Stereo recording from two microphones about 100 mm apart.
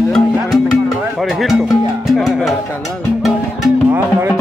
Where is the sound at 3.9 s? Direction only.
20° right (ahead or behind).